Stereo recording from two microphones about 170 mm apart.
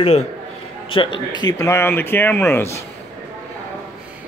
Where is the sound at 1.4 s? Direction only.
15° left (ahead or behind).